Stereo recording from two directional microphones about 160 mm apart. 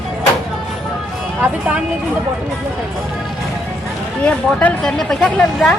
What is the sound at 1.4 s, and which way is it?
Speech, 10° right (ahead or behind).